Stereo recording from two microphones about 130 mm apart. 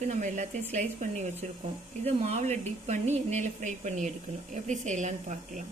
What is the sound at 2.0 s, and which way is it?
Speech, 55° right (ahead or behind).